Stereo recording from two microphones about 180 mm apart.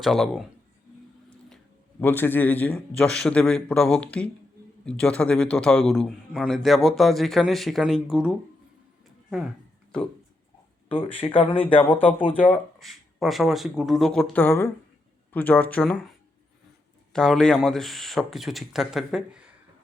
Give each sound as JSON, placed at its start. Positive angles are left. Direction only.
{"t": 0.0, "sound": "a man's voice", "side_deg": 0}
{"t": 2.0, "sound": "a man's voice", "side_deg": 10}
{"t": 10.8, "sound": "speech", "side_deg": 30}
{"t": 11.9, "sound": "a man's voice", "side_deg": 10}
{"t": 17.1, "sound": "a man's voice", "side_deg": 0}